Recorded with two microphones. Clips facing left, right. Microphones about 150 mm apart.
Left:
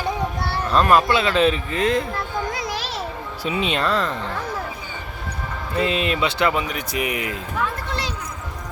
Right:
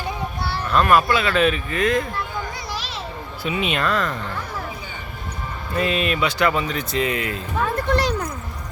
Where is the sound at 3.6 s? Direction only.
30° left (ahead or behind).